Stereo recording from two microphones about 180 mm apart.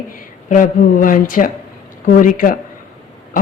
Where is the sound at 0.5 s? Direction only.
50° left (ahead or behind).